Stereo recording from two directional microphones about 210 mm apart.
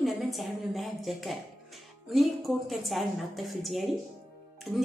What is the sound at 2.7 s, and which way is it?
A woman's voice, centre (ahead or behind).